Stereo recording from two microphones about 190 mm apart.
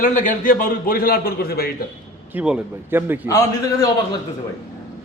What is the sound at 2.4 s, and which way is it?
Speech, 10° right (ahead or behind).